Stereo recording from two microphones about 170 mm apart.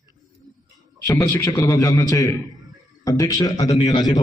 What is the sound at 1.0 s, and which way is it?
A man's voice, 20° left (ahead or behind).